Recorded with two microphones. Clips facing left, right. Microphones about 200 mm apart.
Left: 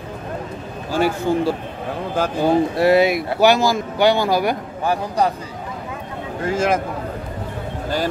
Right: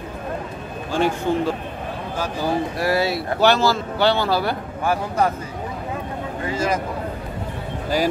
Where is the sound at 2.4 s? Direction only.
25° left (ahead or behind).